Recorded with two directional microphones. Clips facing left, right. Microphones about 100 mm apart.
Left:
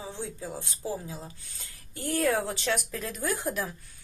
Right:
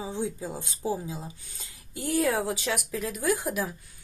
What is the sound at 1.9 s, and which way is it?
Speech, 10° right (ahead or behind).